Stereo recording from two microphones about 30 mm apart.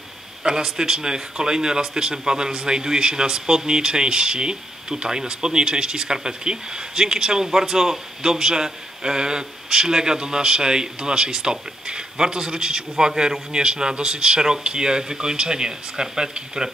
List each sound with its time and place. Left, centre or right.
0.4 s a man's voice: right